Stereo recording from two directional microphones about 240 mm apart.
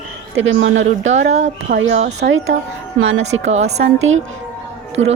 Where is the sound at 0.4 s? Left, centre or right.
Right.